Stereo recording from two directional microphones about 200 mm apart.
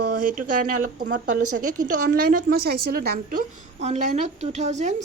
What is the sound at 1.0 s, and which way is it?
A woman's voice, 45° right (ahead or behind).